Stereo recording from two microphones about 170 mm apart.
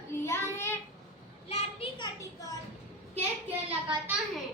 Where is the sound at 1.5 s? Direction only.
35° left (ahead or behind).